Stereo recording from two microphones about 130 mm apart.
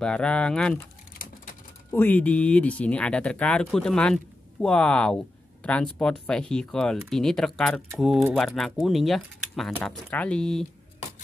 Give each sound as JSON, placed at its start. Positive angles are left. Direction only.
{"t": 0.0, "sound": "speech", "side_deg": 5}
{"t": 1.1, "sound": "a sound", "side_deg": 90}
{"t": 1.9, "sound": "speech", "side_deg": 15}